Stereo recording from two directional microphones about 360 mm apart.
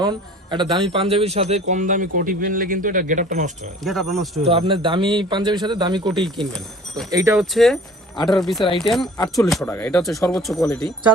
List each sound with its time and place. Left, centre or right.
0.0 s speech: centre
3.8 s speech: centre
4.4 s a man's voice: centre
6.5 s speech: centre